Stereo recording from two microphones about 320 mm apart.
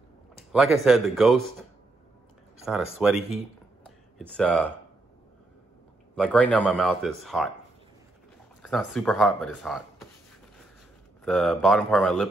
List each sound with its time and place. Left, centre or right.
0.4 s a man's voice: centre
2.6 s a man's voice: centre
3.8 s a sound: centre
6.1 s a man's voice: centre
8.6 s a man's voice: centre
11.2 s a man's voice: centre